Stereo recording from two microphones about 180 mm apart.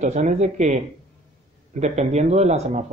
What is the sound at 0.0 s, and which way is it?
Speech, 40° right (ahead or behind).